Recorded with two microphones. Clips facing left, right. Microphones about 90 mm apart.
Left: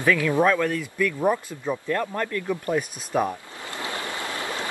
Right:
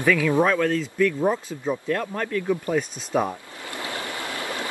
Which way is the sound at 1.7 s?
5° right (ahead or behind).